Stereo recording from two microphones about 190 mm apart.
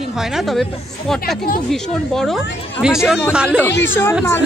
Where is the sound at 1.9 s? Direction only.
Centre (ahead or behind).